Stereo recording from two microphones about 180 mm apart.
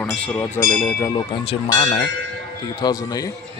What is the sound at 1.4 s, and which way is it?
Speech, 35° left (ahead or behind).